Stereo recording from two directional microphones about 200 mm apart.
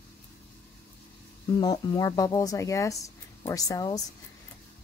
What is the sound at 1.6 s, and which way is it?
Speech, 20° left (ahead or behind).